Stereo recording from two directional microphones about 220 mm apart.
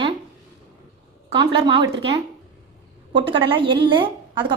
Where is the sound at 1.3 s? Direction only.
20° right (ahead or behind).